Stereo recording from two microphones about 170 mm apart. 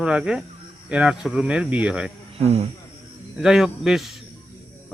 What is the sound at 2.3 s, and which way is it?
Speech, 35° right (ahead or behind).